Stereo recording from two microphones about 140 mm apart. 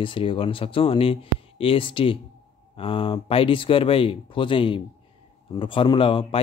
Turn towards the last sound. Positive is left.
turn(degrees=40)  # may be behind; listen again after turning